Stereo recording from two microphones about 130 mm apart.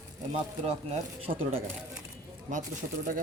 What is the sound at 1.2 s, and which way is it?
Speech, 45° right (ahead or behind).